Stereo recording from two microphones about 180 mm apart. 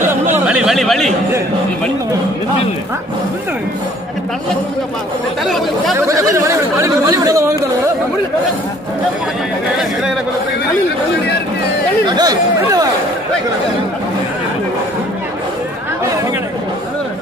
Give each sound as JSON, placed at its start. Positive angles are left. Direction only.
{"t": 0.5, "sound": "speech", "side_deg": -5}
{"t": 5.4, "sound": "speech", "side_deg": 0}
{"t": 5.9, "sound": "speech", "side_deg": -15}
{"t": 12.1, "sound": "speech", "side_deg": -20}